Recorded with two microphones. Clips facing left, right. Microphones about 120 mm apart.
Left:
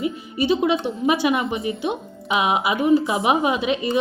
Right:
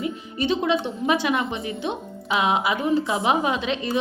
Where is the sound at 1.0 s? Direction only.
10° left (ahead or behind).